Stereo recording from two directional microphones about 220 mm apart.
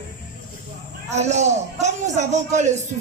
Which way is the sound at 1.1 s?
30° right (ahead or behind).